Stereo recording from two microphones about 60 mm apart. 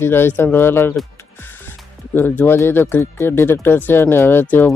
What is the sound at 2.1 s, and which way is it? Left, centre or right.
Speech, left.